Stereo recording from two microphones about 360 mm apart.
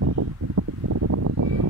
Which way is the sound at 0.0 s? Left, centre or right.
Right.